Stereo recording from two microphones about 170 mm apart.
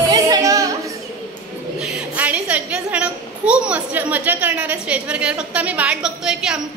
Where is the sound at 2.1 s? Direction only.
10° right (ahead or behind).